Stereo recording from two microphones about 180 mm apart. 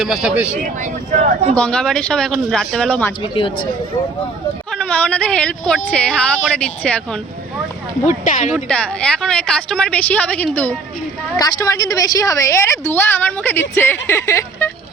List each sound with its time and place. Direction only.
0.0 s a woman's voice: centre (ahead or behind)
0.6 s speech: 45° right (ahead or behind)
1.5 s a woman's voice: 5° left (ahead or behind)
3.3 s speech: 30° left (ahead or behind)
4.7 s a woman's voice: 5° left (ahead or behind)
8.0 s speech: 45° left (ahead or behind)
8.5 s a woman's voice: 5° left (ahead or behind)
11.3 s a woman's voice: 20° left (ahead or behind)